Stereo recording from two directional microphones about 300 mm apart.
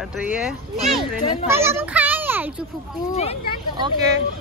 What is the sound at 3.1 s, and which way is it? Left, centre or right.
Speech, left.